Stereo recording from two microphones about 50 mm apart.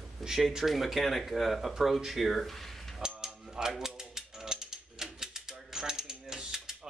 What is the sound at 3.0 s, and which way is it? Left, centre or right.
Mechanisms, centre.